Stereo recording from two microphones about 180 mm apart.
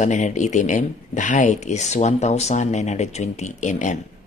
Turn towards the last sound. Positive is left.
turn(degrees=45)  # may be behind; listen again after turning